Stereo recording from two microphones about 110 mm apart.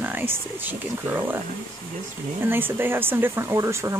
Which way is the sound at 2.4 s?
20° right (ahead or behind).